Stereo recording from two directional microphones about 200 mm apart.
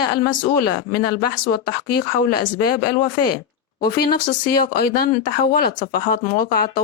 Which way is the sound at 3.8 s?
50° left (ahead or behind).